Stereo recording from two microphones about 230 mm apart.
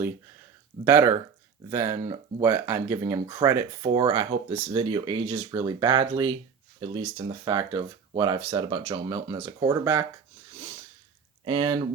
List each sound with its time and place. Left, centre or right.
0.9 s speech: centre
11.4 s speech: right